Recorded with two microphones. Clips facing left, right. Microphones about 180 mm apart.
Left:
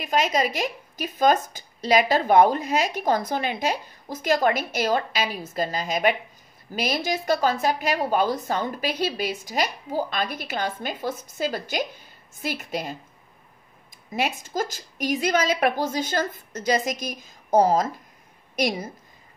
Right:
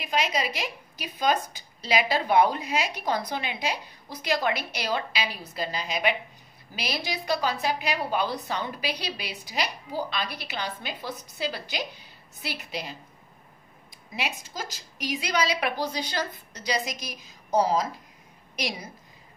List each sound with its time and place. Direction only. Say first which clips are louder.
0.0 s a woman's voice: left 5 dB; 45° left (ahead or behind)
14.1 s a woman's voice: left 8 dB; 50° left (ahead or behind)